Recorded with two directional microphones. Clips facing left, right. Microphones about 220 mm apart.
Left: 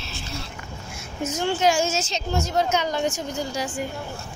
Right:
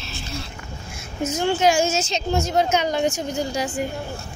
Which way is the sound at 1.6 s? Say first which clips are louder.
Right 2 dB; 10° right (ahead or behind).